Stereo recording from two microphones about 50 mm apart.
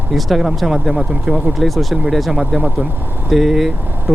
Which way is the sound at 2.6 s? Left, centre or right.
Right.